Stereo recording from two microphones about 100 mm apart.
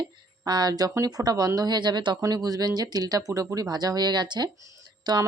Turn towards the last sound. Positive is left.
turn(degrees=-45)  # may be behind; listen again after turning